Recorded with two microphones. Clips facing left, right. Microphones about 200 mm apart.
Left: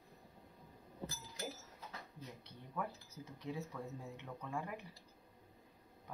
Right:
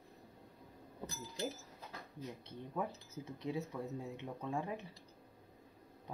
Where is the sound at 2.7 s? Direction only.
20° right (ahead or behind).